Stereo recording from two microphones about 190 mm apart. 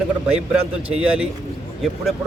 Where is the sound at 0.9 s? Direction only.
5° right (ahead or behind).